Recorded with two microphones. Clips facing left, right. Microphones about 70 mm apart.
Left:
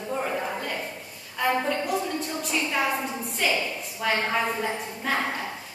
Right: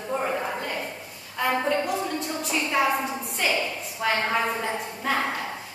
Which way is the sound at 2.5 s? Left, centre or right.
Centre.